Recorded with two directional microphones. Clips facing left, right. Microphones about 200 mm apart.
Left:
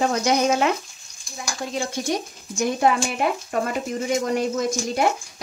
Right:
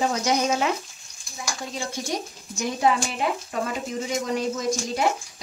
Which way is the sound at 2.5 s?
55° left (ahead or behind).